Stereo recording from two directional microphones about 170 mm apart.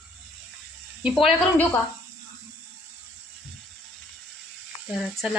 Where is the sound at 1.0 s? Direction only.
Centre (ahead or behind).